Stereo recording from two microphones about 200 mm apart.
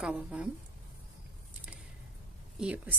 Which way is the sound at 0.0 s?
5° right (ahead or behind).